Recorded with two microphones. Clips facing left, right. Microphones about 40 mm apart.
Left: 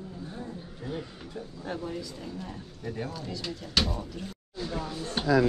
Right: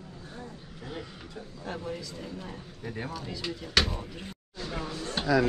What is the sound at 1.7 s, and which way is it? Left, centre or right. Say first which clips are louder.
Speech: left 1 dB; centre.